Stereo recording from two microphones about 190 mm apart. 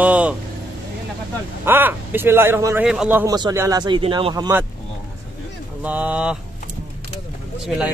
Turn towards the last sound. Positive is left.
turn(degrees=0)  # may be behind; listen again after turning